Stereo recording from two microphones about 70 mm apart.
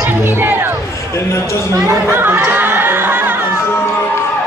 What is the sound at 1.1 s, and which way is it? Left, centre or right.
Speech, left.